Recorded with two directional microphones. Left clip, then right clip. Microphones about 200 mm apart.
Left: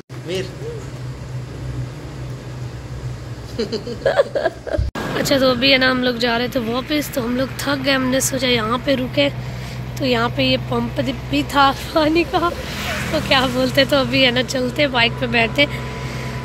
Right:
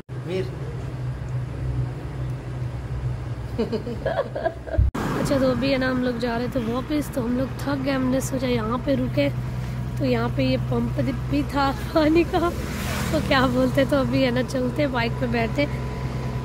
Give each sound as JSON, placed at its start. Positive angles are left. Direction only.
{"t": 4.0, "sound": "speech", "side_deg": 55}
{"t": 5.2, "sound": "speech", "side_deg": 0}